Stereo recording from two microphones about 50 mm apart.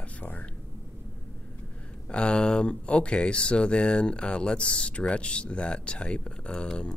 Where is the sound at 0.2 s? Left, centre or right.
Left.